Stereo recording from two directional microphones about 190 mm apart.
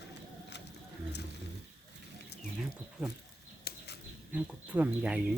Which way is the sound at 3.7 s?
55° left (ahead or behind).